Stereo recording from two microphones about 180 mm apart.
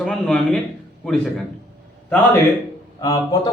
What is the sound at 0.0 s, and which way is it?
A man's voice, 5° left (ahead or behind).